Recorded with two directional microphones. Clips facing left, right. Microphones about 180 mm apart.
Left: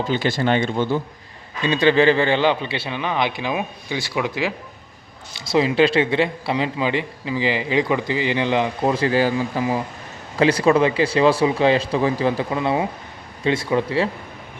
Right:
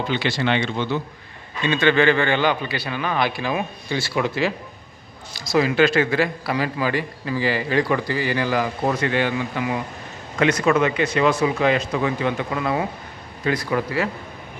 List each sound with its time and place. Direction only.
0.1 s speech: 45° left (ahead or behind)
1.6 s a man's voice: 35° left (ahead or behind); by 4.5 s 15° left (ahead or behind)
5.5 s a man's voice: 25° left (ahead or behind)